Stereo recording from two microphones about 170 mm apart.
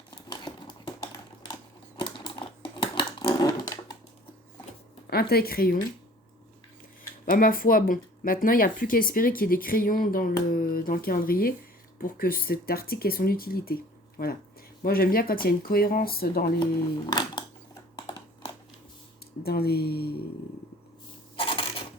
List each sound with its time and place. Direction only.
0.3 s a sound: 25° left (ahead or behind)
2.0 s typing: 30° left (ahead or behind)
2.8 s a sound: 25° left (ahead or behind)
5.1 s speech: 65° left (ahead or behind)
7.3 s speech: 55° left (ahead or behind)
17.1 s speech: 25° left (ahead or behind)
17.9 s a sound: 25° left (ahead or behind)
19.4 s speech: 65° left (ahead or behind)
21.3 s coin: 30° left (ahead or behind)